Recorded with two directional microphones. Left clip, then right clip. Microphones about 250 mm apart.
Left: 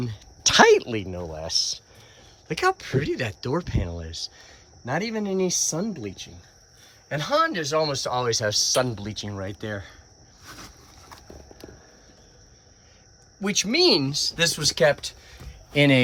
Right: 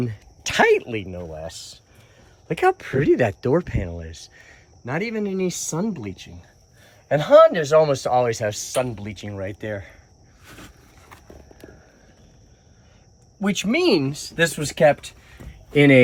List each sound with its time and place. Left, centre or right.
0.4 s speech: centre
2.5 s speech: centre
13.6 s speech: centre